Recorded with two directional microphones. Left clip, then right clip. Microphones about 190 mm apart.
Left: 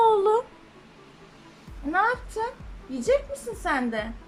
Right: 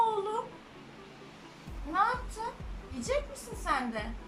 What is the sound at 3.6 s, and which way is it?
Speech, 45° left (ahead or behind).